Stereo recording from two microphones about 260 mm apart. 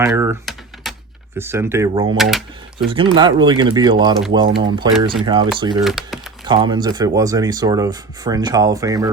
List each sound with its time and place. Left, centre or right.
0.0 s typing: centre
1.4 s speech: centre
2.1 s speech: centre
2.7 s speech: centre
5.8 s speech: centre
6.5 s speech: centre